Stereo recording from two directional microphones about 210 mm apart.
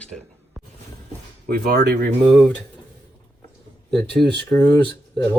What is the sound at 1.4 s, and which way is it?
Speech, 50° right (ahead or behind).